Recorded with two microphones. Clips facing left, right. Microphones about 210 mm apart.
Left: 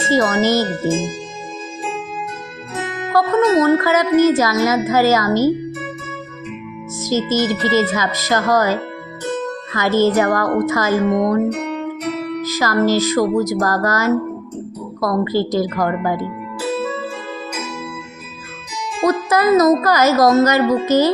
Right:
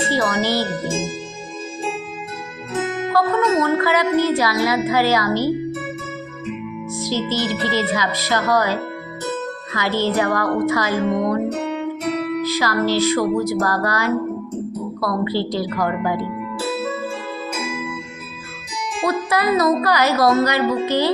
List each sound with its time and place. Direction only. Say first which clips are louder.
0.1 s speech: left 8 dB; 45° left (ahead or behind)
3.1 s music: left 4 dB; 45° left (ahead or behind)
3.6 s speech: left 4 dB; 45° left (ahead or behind)
7.0 s speech: left 5 dB; 45° left (ahead or behind)
12.4 s speech: left 2 dB; 45° left (ahead or behind)
19.0 s speech: left 5 dB; 45° left (ahead or behind)